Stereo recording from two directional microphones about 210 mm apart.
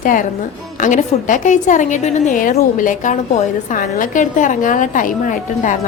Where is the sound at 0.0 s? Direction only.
40° left (ahead or behind).